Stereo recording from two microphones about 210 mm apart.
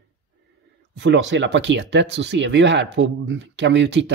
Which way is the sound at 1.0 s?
60° right (ahead or behind).